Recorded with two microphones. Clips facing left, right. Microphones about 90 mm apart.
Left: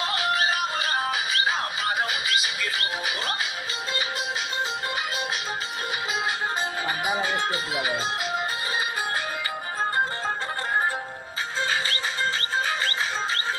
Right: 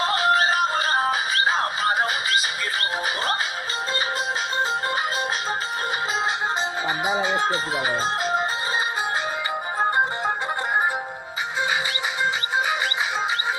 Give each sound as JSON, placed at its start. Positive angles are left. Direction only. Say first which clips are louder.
{"t": 0.0, "sound": "music", "louder": "right 5 dB", "side_deg": -35}
{"t": 7.1, "sound": "speech", "louder": "right 4 dB", "side_deg": -20}
{"t": 9.8, "sound": "music", "louder": "right 4 dB", "side_deg": -20}
{"t": 12.5, "sound": "music", "louder": "right 3 dB", "side_deg": -15}